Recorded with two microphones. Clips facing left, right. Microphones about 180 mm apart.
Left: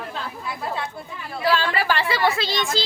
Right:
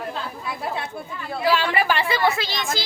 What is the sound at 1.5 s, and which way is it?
A woman's voice, 15° right (ahead or behind).